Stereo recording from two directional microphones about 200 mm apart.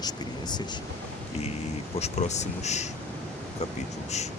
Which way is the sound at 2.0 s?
35° left (ahead or behind).